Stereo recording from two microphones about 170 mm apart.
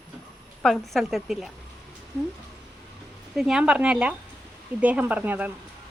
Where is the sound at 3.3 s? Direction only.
5° right (ahead or behind).